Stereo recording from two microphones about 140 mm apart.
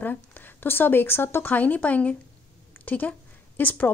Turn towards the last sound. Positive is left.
turn(degrees=10)  # may be behind; listen again after turning